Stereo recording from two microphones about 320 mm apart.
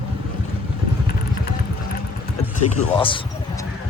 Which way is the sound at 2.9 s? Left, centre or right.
Centre.